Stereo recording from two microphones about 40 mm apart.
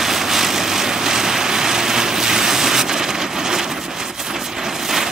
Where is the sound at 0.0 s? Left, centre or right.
Centre.